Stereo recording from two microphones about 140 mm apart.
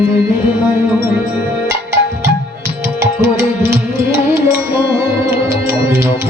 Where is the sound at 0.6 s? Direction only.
15° right (ahead or behind).